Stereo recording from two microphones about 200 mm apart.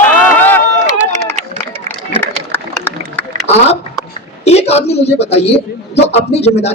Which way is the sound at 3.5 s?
30° left (ahead or behind).